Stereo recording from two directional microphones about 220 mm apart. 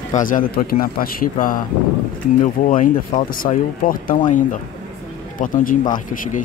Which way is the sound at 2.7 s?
40° left (ahead or behind).